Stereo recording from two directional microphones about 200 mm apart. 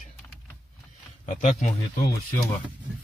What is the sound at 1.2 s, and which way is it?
Speech, 35° left (ahead or behind).